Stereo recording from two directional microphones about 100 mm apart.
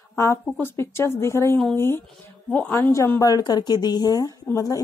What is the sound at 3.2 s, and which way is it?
Speech, 40° left (ahead or behind).